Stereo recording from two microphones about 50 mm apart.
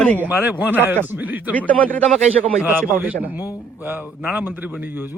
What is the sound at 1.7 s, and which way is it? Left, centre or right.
Speech, left.